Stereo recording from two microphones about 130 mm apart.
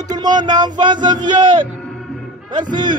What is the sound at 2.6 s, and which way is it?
Speech, 90° right.